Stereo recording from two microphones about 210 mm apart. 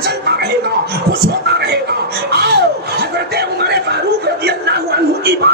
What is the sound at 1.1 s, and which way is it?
Speech, 50° right (ahead or behind).